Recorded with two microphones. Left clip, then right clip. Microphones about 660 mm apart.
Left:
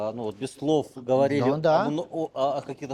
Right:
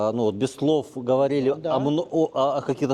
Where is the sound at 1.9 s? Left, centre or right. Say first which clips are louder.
Right 6 dB; right.